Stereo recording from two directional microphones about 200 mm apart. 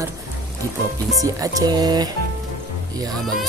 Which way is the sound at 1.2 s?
15° right (ahead or behind).